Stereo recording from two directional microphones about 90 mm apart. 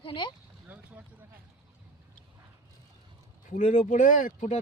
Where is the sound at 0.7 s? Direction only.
15° right (ahead or behind).